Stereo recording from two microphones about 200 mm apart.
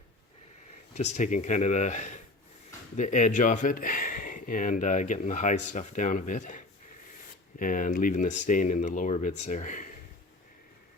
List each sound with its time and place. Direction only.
0.9 s speech: 35° left (ahead or behind)
7.6 s speech: 45° left (ahead or behind)